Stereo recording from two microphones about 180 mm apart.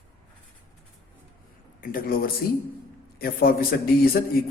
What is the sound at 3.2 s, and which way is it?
Speech, 55° left (ahead or behind).